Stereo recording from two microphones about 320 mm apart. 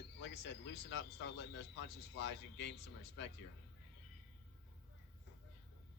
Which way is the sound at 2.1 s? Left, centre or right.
Left.